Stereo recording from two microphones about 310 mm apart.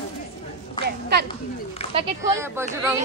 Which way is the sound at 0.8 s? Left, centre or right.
Right.